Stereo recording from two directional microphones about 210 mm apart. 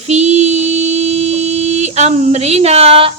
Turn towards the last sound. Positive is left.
turn(degrees=-30)  # may be behind; listen again after turning